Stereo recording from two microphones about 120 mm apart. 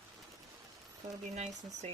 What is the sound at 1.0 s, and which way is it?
Speech, 70° right (ahead or behind).